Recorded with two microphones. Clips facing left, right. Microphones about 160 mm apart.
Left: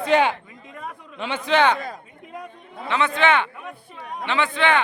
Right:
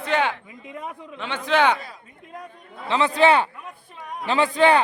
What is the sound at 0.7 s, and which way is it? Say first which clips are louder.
Speech: right 2 dB; 15° right (ahead or behind).